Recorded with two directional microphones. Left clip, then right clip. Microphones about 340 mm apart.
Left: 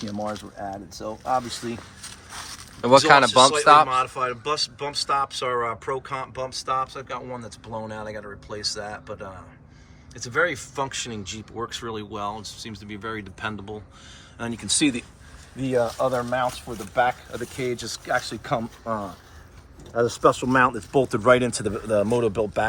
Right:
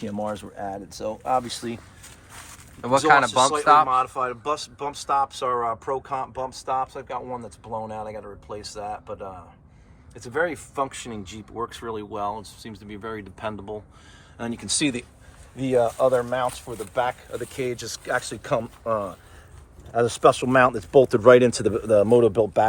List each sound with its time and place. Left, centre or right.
0.2 s speech: right
3.1 s speech: centre
3.8 s speech: centre
10.2 s speech: centre